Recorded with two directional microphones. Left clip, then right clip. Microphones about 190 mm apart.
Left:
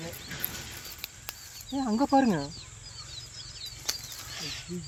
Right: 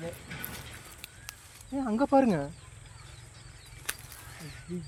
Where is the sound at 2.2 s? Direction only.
30° right (ahead or behind).